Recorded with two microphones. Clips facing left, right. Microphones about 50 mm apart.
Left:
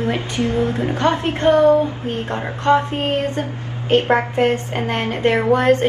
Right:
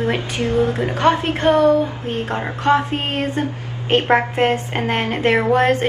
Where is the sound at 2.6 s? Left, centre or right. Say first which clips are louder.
Left 1 dB; right.